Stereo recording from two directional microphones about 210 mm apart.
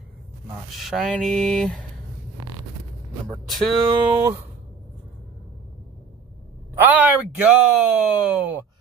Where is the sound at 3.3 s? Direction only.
Centre (ahead or behind).